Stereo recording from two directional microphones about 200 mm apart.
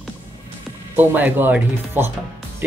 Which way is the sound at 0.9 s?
10° right (ahead or behind).